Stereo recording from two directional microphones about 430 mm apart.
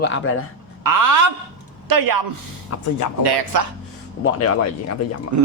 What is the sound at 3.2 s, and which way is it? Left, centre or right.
Speech, right.